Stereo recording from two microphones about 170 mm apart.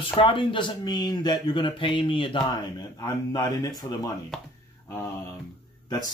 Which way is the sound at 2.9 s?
20° left (ahead or behind).